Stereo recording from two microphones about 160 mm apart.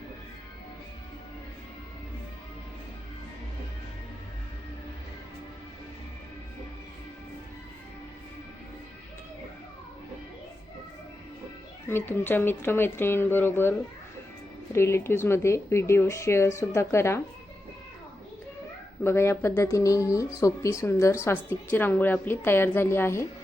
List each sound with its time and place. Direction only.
11.9 s speech: 15° left (ahead or behind)
19.0 s speech: 15° left (ahead or behind)